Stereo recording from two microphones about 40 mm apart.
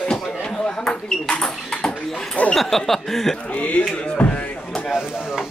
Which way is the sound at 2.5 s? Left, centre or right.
Centre.